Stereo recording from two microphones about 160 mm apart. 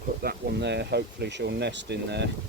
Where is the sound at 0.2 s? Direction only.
80° right.